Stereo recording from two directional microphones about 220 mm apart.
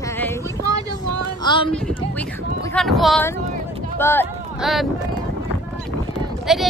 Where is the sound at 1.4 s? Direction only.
20° left (ahead or behind).